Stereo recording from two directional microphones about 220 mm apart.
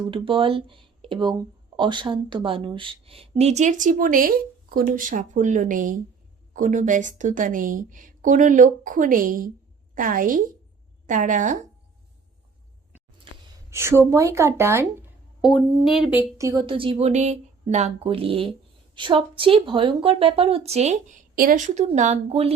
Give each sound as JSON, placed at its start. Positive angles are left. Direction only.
{"t": 0.1, "sound": "a woman's voice", "side_deg": -25}
{"t": 13.3, "sound": "a sound", "side_deg": -25}
{"t": 13.7, "sound": "a woman's voice", "side_deg": -10}
{"t": 15.4, "sound": "speech", "side_deg": 0}